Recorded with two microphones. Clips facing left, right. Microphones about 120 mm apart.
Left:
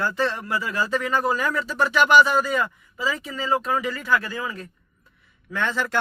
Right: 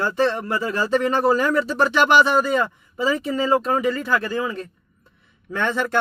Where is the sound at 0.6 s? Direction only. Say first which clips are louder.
Right 5 dB; 30° right (ahead or behind).